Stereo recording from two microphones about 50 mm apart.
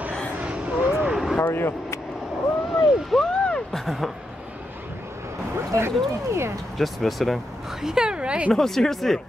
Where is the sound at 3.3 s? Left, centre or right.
Centre.